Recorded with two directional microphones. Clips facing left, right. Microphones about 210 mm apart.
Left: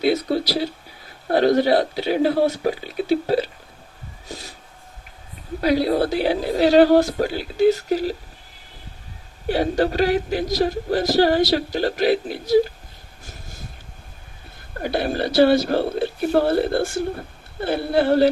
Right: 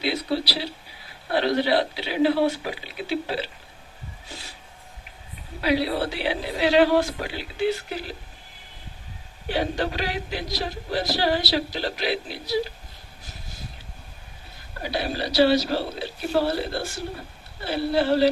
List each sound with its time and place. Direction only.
0.0 s speech: 45° left (ahead or behind)
4.3 s a sound: 40° left (ahead or behind)
5.5 s a woman's voice: 45° left (ahead or behind)
9.5 s speech: 40° left (ahead or behind)
13.2 s vehicle: 50° left (ahead or behind)
14.8 s speech: 50° left (ahead or behind)